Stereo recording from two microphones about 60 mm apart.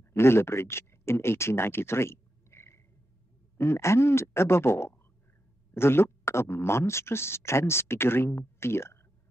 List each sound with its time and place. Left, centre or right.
0.1 s speech: left